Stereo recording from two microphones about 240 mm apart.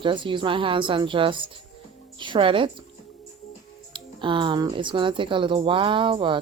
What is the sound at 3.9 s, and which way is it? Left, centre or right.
Speech, right.